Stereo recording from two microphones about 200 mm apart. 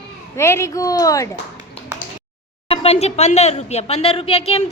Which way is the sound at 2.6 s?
30° left (ahead or behind).